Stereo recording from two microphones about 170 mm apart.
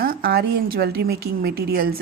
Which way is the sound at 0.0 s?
65° right (ahead or behind).